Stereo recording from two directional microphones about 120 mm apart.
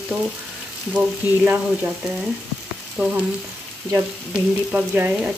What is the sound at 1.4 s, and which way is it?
Frying, 15° right (ahead or behind).